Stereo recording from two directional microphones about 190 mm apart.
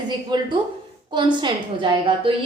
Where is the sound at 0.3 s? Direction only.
25° right (ahead or behind).